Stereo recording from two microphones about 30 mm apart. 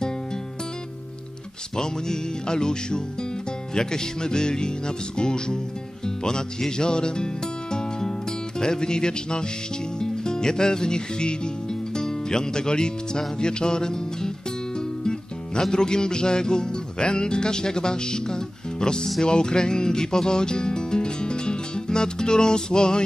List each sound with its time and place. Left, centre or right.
1.8 s music: left
19.2 s speech: left